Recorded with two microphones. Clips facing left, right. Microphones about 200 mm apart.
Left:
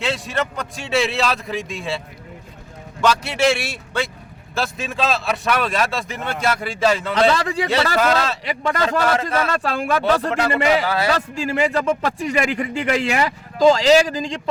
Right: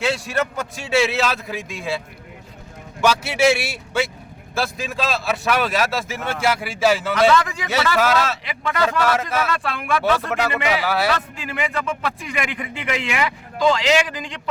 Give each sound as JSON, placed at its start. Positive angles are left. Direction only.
{"t": 0.0, "sound": "a man's voice", "side_deg": 0}
{"t": 3.0, "sound": "a man's voice", "side_deg": -5}
{"t": 7.1, "sound": "speech", "side_deg": 30}
{"t": 7.9, "sound": "a man's voice", "side_deg": -5}
{"t": 8.4, "sound": "speech", "side_deg": 35}